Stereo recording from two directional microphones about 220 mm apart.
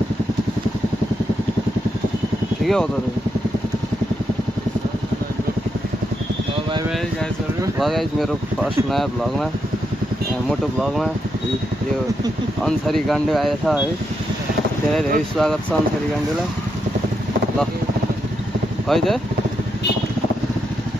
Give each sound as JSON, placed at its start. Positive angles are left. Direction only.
{"t": 2.6, "sound": "speech", "side_deg": 0}
{"t": 7.8, "sound": "speech", "side_deg": 0}
{"t": 12.6, "sound": "speech", "side_deg": 0}
{"t": 14.9, "sound": "speech", "side_deg": 0}
{"t": 18.9, "sound": "speech", "side_deg": 0}